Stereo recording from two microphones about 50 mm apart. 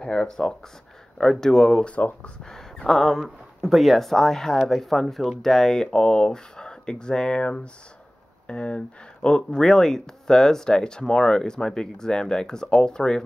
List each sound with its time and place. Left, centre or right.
0.0 s speech: centre
1.9 s speech: left
2.4 s a sound: centre
2.9 s speech: centre